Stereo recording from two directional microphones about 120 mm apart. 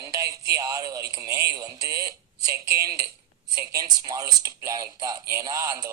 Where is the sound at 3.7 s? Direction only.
30° right (ahead or behind).